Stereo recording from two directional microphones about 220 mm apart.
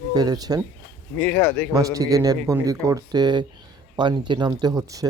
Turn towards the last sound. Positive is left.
turn(degrees=-15)  # may be behind; listen again after turning